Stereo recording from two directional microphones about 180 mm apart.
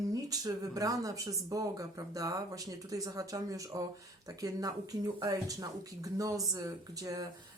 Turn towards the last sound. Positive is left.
turn(degrees=-20)  # may be behind; listen again after turning